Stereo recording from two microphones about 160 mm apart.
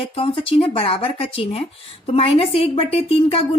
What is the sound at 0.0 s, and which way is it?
A woman's voice, 35° left (ahead or behind).